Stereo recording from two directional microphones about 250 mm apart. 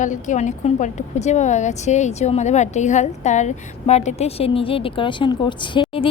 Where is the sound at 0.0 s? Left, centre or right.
Left.